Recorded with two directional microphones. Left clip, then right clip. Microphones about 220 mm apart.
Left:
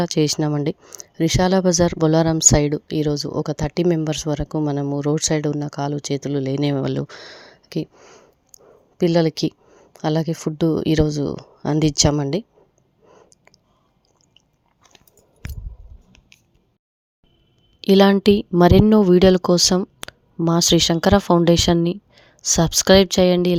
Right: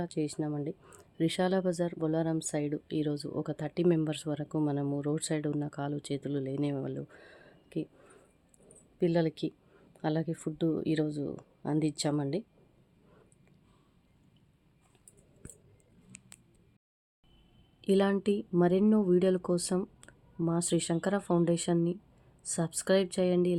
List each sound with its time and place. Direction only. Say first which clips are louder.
0.0 s speech: left 15 dB; 45° left (ahead or behind)
0.8 s speech: left 10 dB; 30° left (ahead or behind)
13.1 s a sound: left 15 dB; 25° left (ahead or behind)
17.7 s speech: left 14 dB; 40° left (ahead or behind)